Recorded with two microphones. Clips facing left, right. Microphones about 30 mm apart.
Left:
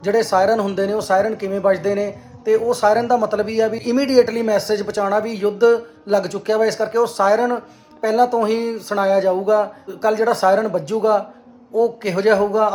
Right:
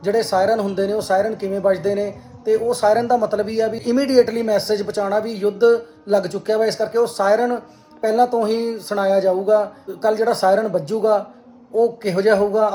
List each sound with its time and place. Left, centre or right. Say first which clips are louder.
0.0 s speech: left 1 dB; left
0.5 s speech: left 1 dB; left
1.7 s speech: left 1 dB; left
3.2 s speech: left 1 dB; left
3.5 s speech: left 2 dB; left
3.8 s speech: even; centre
4.3 s speech: left 1 dB; left
4.6 s speech: left 1 dB; left
8.0 s speech: left 1 dB; left